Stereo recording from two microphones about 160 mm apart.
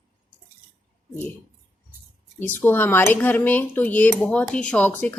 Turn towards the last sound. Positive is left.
turn(degrees=10)  # may be behind; listen again after turning